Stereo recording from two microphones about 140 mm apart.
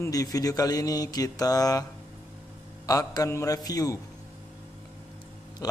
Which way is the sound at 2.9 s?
25° left (ahead or behind).